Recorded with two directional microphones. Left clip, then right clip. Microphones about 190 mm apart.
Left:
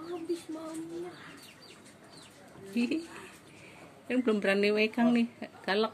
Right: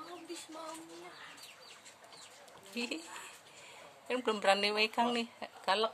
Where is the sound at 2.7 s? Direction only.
20° right (ahead or behind).